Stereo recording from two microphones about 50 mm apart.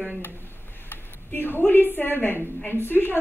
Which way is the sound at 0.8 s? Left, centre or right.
Left.